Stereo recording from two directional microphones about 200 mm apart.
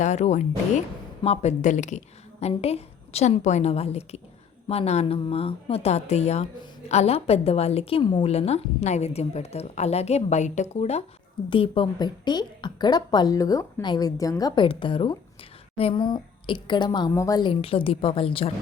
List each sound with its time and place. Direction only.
0.0 s a woman's voice: 35° left (ahead or behind)